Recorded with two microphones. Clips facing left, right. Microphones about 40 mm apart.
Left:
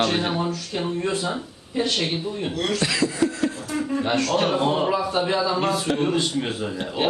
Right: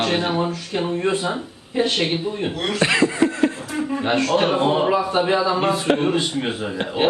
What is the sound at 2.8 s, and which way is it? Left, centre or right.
Chuckle, right.